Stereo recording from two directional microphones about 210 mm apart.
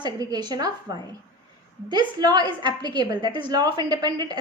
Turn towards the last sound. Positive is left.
turn(degrees=-20)  # may be behind; listen again after turning